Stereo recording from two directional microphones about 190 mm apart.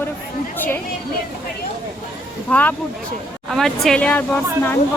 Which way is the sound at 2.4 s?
10° left (ahead or behind).